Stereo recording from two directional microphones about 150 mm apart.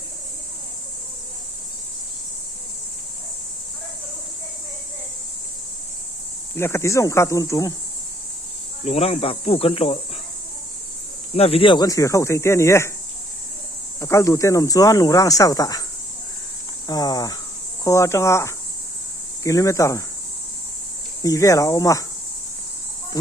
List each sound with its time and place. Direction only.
6.6 s speech: 15° left (ahead or behind)
8.8 s cricket: 45° left (ahead or behind)
11.3 s speech: 40° left (ahead or behind); by 12.9 s 20° left (ahead or behind)
14.0 s speech: 20° left (ahead or behind)
16.8 s speech: 25° left (ahead or behind)
21.2 s speech: 20° left (ahead or behind)